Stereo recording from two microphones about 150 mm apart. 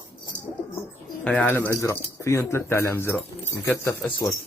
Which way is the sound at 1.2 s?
10° left (ahead or behind).